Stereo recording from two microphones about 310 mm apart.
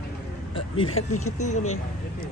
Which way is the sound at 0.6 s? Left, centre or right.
Centre.